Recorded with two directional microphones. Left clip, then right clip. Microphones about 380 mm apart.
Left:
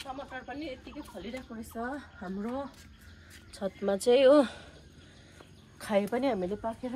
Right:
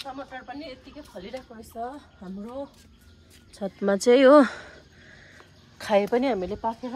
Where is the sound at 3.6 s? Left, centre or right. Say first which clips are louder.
Right 6 dB; right.